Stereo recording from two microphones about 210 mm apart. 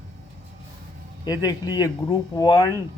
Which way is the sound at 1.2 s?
20° left (ahead or behind).